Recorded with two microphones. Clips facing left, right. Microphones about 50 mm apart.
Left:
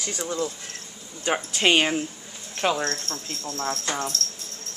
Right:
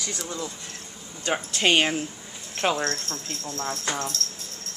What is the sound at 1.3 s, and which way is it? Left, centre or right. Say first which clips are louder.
Speech: left 1 dB; centre.